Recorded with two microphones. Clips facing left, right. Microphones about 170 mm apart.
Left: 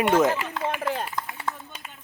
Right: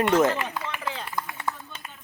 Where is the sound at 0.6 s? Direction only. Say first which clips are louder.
Left 6 dB; 50° left (ahead or behind).